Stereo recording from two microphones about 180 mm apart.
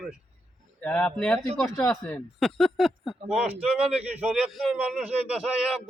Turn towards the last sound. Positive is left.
turn(degrees=-5)  # may be behind; listen again after turning